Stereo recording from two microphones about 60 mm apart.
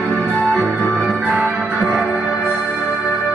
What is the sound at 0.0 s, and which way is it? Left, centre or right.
Music, centre.